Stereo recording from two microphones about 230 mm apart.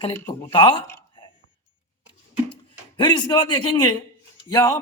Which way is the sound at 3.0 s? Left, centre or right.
Centre.